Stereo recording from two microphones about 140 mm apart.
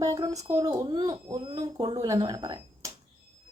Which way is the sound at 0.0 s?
25° right (ahead or behind).